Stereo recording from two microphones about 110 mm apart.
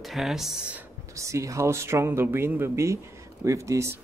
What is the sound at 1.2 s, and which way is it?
Speech, 25° right (ahead or behind).